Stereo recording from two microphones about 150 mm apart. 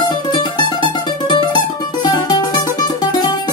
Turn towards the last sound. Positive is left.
turn(degrees=30)  # may be behind; listen again after turning